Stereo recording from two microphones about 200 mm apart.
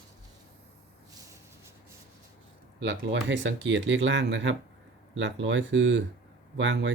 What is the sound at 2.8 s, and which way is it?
Speech, 60° right (ahead or behind).